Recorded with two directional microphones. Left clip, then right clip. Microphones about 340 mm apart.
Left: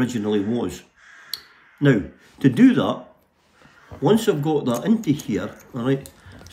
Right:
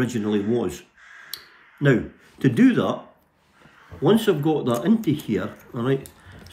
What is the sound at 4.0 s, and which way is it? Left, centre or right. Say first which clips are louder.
Speech: even; centre.